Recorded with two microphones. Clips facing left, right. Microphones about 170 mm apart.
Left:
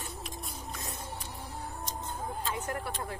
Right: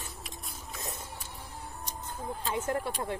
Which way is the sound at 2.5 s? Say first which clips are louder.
Right 7 dB; 25° right (ahead or behind).